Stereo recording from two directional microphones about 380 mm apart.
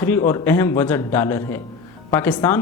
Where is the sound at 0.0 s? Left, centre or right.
Centre.